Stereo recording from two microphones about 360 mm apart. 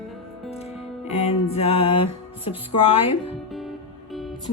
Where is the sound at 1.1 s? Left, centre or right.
Centre.